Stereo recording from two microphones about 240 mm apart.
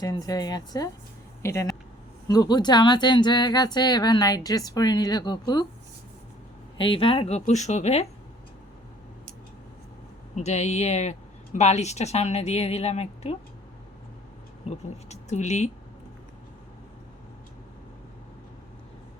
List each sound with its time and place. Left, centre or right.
0.0 s speech: centre
6.7 s a woman's voice: left
10.3 s a woman's voice: left
14.7 s a woman's voice: left